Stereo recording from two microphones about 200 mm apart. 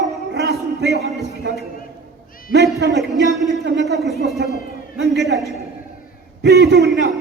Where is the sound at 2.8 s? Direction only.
60° right (ahead or behind).